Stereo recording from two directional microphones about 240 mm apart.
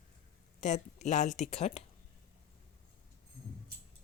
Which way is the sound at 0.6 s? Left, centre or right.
Left.